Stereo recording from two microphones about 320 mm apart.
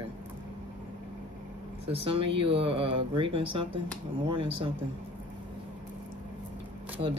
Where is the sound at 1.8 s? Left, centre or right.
Centre.